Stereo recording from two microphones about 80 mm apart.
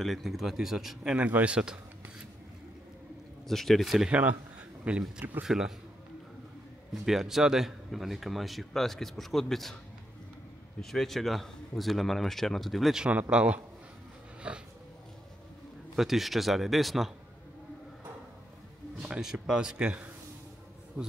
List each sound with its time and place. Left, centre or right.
0.0 s speech: centre
3.4 s speech: centre
4.1 s speech: right
5.4 s speech: centre
6.9 s speech: centre
10.8 s speech: centre
13.0 s speech: centre
16.0 s speech: centre
18.9 s speech: centre